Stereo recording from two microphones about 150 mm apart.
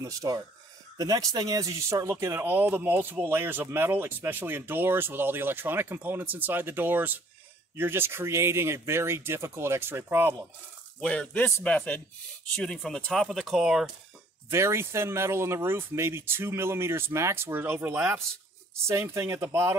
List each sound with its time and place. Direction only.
0.0 s speech: 25° right (ahead or behind)
11.0 s a man's voice: 5° left (ahead or behind)
14.5 s speech: 15° right (ahead or behind)